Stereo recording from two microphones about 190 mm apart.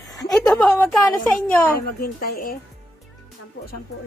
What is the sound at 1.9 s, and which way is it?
Speech, 50° left (ahead or behind).